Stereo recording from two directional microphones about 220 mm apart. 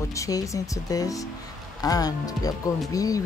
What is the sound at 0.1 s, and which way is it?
Speech, 15° left (ahead or behind).